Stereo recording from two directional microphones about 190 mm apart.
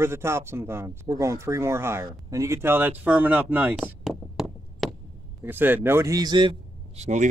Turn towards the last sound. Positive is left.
turn(degrees=-35)  # may be behind; listen again after turning